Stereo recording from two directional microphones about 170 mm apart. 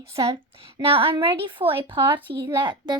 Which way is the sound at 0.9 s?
30° right (ahead or behind).